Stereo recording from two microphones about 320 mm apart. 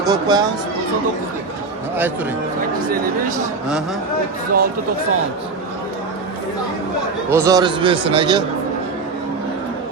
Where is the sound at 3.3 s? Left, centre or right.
Centre.